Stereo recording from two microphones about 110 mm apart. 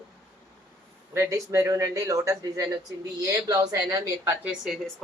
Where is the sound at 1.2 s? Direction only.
25° right (ahead or behind).